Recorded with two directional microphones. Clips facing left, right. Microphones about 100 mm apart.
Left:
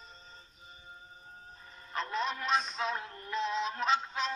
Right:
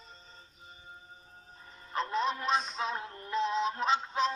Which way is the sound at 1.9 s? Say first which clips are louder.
Right 3 dB; 30° right (ahead or behind).